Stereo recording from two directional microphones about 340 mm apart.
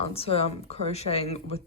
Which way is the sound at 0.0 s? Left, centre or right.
Centre.